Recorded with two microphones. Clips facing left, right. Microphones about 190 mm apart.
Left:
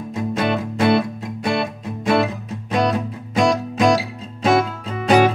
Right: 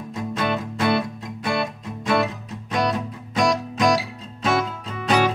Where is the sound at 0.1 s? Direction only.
15° left (ahead or behind).